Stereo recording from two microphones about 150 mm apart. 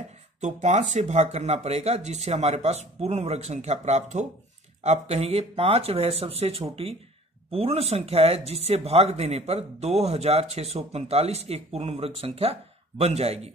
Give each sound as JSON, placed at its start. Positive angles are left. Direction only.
{"t": 0.4, "sound": "speech", "side_deg": -50}